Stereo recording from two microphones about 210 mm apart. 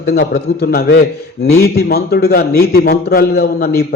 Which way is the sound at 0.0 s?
50° left (ahead or behind).